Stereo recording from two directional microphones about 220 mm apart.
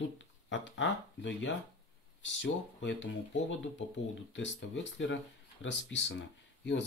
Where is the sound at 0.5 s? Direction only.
55° left (ahead or behind).